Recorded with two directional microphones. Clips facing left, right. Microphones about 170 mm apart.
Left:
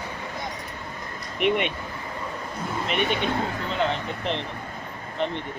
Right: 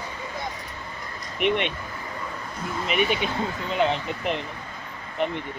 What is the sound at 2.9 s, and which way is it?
Speech, 5° right (ahead or behind).